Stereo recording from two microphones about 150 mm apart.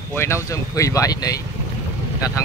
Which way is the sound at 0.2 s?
20° left (ahead or behind).